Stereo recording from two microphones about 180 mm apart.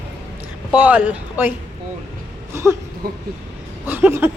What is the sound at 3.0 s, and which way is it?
Speech, 60° right (ahead or behind).